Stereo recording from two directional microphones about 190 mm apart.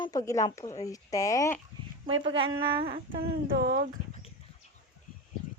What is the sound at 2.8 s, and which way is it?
Humming, 50° right (ahead or behind).